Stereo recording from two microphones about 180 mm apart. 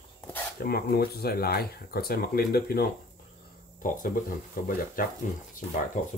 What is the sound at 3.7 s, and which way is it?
Speech, 50° left (ahead or behind).